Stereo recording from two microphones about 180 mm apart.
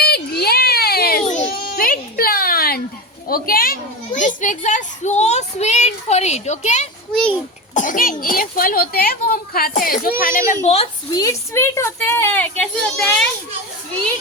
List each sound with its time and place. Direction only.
0.0 s a sound: 60° left (ahead or behind)
3.2 s a child's voice: 55° left (ahead or behind)
7.1 s a child's voice: 5° left (ahead or behind)
7.7 s speech: 45° left (ahead or behind)
10.5 s a child's voice: 40° left (ahead or behind)
11.1 s speech: 20° left (ahead or behind)